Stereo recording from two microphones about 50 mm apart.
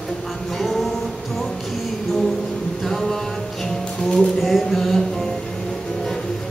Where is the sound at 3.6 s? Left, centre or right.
Centre.